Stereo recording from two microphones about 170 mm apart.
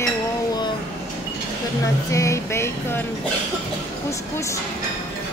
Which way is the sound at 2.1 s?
15° left (ahead or behind).